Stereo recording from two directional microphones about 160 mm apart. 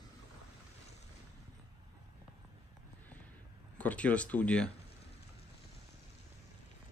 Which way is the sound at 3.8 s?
10° left (ahead or behind).